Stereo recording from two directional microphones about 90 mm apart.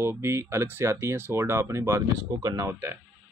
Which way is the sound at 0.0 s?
30° right (ahead or behind).